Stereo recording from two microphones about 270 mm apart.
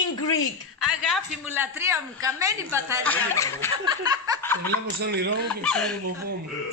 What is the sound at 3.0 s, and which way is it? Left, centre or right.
Speech, centre.